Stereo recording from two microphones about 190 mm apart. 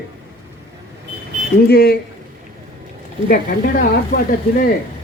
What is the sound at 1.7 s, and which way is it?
Speech, 55° left (ahead or behind).